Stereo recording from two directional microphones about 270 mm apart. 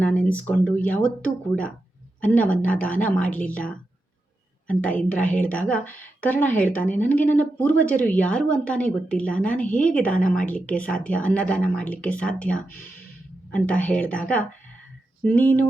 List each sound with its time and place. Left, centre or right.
0.0 s a woman's voice: centre
10.2 s a woman's voice: left
10.4 s a woman's voice: centre